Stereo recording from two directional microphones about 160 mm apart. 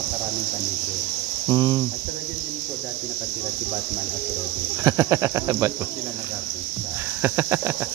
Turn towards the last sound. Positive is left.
turn(degrees=-15)  # may be behind; listen again after turning